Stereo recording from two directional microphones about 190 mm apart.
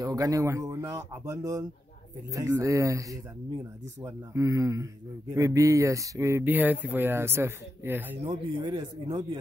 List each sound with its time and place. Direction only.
0.0 s speech: 20° right (ahead or behind)
8.2 s speech: 25° right (ahead or behind)